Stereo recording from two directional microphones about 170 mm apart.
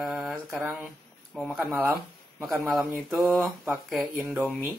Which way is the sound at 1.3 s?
Centre (ahead or behind).